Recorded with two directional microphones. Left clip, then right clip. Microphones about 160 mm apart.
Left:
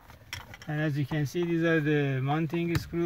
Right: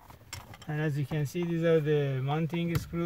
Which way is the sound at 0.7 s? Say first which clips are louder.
Left 2 dB; 25° left (ahead or behind).